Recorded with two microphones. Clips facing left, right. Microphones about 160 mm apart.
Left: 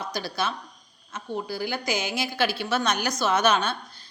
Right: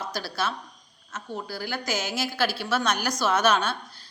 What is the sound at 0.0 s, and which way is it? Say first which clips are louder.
Speech: left 1 dB; 5° right (ahead or behind).